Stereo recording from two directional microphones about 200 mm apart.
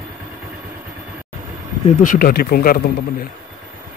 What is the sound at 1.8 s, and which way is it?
Speech, 40° left (ahead or behind).